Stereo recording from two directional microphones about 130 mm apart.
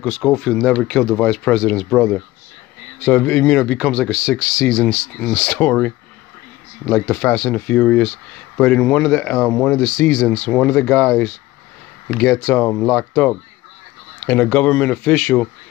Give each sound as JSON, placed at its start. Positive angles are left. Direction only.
{"t": 0.2, "sound": "speech", "side_deg": 5}